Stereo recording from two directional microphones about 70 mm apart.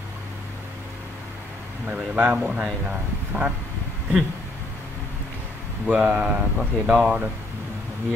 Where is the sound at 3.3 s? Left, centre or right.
Right.